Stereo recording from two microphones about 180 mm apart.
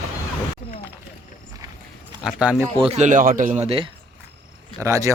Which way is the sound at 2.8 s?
40° right (ahead or behind).